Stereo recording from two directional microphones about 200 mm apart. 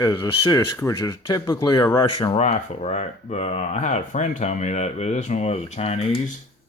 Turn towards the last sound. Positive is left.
turn(degrees=30)  # may be behind; listen again after turning